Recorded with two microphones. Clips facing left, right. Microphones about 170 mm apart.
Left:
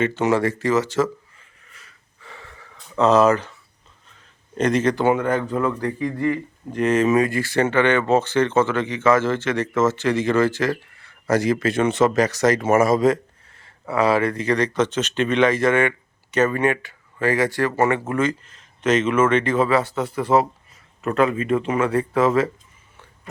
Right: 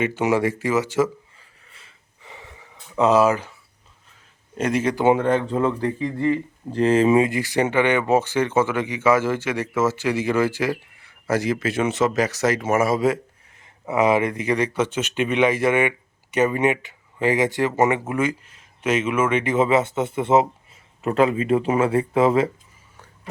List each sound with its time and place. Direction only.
0.0 s speech: 10° right (ahead or behind)
2.2 s gasp: 15° right (ahead or behind)
4.1 s a sound: 10° right (ahead or behind)
5.0 s speech: 30° right (ahead or behind); by 12.5 s 5° right (ahead or behind)
12.5 s speech: 55° left (ahead or behind)
12.8 s speech: 5° right (ahead or behind); by 22.4 s 25° right (ahead or behind)